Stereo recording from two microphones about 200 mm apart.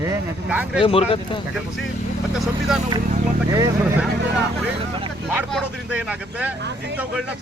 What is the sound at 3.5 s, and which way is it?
Speech, 15° right (ahead or behind).